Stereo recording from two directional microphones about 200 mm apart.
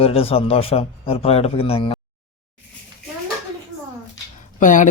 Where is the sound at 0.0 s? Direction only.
30° left (ahead or behind).